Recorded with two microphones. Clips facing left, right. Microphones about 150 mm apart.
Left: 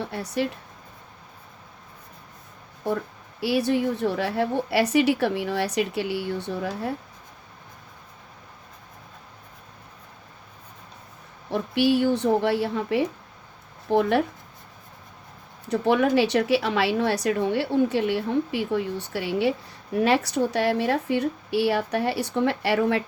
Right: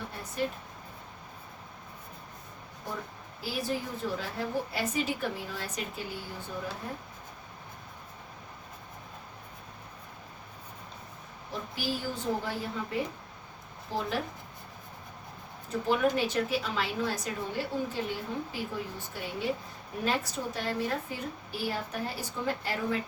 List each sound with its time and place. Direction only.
0.0 s speech: 75° left (ahead or behind)
3.4 s speech: 75° left (ahead or behind)
11.5 s speech: 70° left (ahead or behind)
13.9 s speech: 70° left (ahead or behind)
15.7 s speech: 70° left (ahead or behind)